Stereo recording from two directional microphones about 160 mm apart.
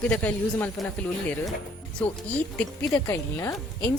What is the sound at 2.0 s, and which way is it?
Speech, 5° left (ahead or behind).